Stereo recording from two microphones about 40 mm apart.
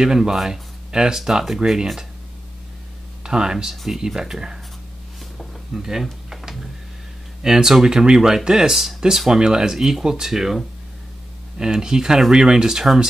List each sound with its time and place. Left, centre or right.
0.0 s speech: centre
3.3 s speech: centre
3.7 s speech: centre
4.0 s speech: centre
5.7 s speech: centre
6.3 s a sound: centre
7.4 s speech: centre